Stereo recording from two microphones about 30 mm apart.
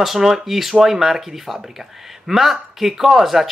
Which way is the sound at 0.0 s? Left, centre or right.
Centre.